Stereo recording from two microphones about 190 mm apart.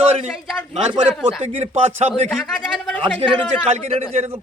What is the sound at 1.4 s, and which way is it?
Speech, 35° right (ahead or behind).